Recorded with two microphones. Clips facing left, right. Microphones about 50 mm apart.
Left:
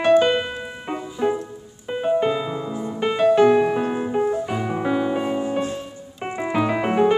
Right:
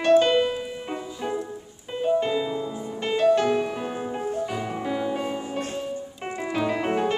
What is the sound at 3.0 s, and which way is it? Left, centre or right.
Music, centre.